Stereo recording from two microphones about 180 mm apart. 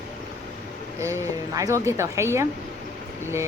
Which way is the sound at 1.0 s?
15° right (ahead or behind).